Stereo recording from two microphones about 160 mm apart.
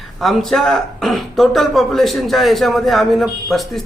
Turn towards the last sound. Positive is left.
turn(degrees=0)  # may be behind; listen again after turning